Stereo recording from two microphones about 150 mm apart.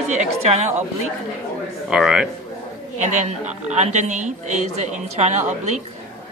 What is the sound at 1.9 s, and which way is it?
Speech, centre (ahead or behind).